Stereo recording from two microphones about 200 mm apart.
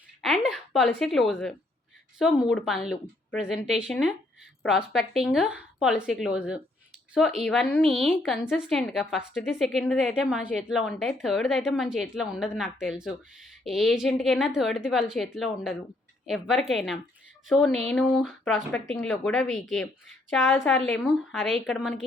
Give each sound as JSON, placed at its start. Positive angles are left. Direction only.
{"t": 0.2, "sound": "a woman's voice", "side_deg": 0}